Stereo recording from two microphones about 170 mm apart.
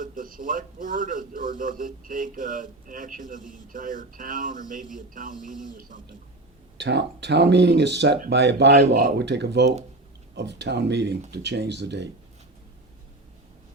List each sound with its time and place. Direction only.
0.0 s a man's voice: 50° right (ahead or behind)
6.7 s speech: 90° right
9.0 s speech: 70° right (ahead or behind); by 12.0 s 90° right